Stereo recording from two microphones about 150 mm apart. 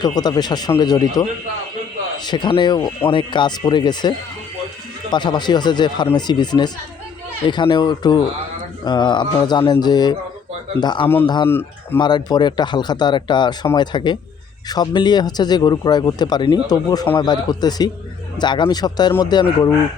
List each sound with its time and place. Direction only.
0.0 s speech: 25° left (ahead or behind)
5.1 s speech: 30° left (ahead or behind)
11.4 s speech: 15° left (ahead or behind)
11.9 s speech: 30° left (ahead or behind)